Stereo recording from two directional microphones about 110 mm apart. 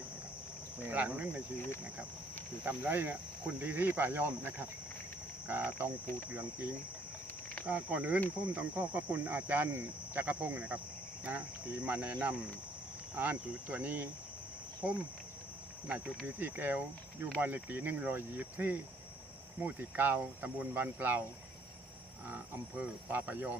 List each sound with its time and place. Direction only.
0.9 s speech: 15° right (ahead or behind)
2.6 s speech: 15° right (ahead or behind)
22.8 s speech: 15° right (ahead or behind)